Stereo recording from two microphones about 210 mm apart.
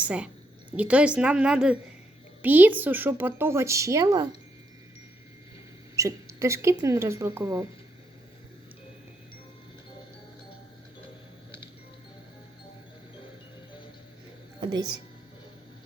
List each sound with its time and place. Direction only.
0.0 s a woman's voice: 5° right (ahead or behind)
6.0 s speech: 15° right (ahead or behind)
14.6 s a sound: 20° right (ahead or behind)